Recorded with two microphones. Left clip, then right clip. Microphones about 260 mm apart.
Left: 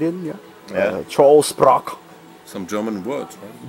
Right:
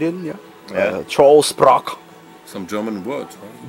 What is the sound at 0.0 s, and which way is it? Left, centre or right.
Speech, centre.